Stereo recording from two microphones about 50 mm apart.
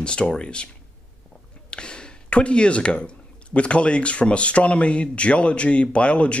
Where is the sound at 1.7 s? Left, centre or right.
Centre.